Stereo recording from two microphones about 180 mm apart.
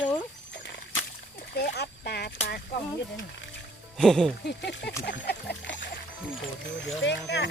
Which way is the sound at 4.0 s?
Centre (ahead or behind).